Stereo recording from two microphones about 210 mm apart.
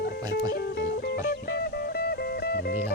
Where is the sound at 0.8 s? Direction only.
50° left (ahead or behind).